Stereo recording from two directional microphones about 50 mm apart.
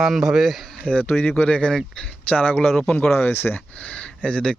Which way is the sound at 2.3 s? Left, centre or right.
Left.